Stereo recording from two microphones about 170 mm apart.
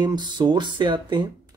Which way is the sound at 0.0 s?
25° right (ahead or behind).